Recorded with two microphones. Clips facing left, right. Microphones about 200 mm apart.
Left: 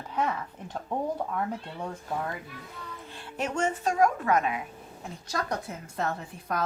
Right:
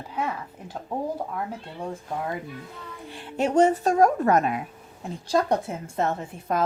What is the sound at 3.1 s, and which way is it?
Music, 20° right (ahead or behind).